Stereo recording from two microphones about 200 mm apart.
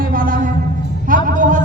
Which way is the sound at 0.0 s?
45° right (ahead or behind).